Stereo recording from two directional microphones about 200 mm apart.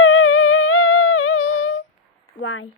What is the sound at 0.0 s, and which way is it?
Music, 90° left.